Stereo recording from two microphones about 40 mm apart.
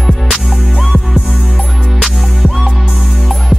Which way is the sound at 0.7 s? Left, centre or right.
Centre.